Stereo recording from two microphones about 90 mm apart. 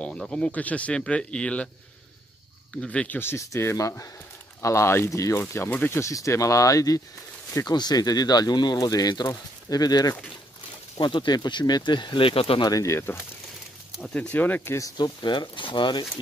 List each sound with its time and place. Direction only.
0.0 s speech: 10° left (ahead or behind)
2.7 s speech: 10° left (ahead or behind)
3.2 s speech: 30° left (ahead or behind)
5.9 s speech: 35° left (ahead or behind)
11.0 s speech: 60° left (ahead or behind); by 12.6 s 80° left
12.6 s speech: 40° left (ahead or behind)
14.1 s speech: 20° left (ahead or behind)
14.8 s speech: 40° left (ahead or behind)
15.2 s speech: 60° left (ahead or behind)